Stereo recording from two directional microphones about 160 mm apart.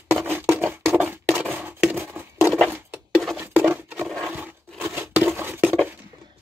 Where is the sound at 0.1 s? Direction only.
15° right (ahead or behind).